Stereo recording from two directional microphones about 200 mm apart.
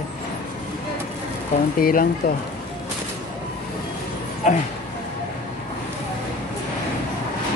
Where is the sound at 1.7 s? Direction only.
45° left (ahead or behind).